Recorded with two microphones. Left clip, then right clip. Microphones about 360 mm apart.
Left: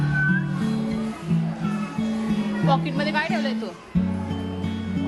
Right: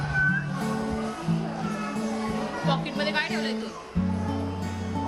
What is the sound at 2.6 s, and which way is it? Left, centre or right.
Music, centre.